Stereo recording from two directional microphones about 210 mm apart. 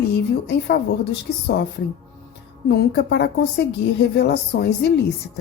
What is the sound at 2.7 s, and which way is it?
Speech, 50° left (ahead or behind).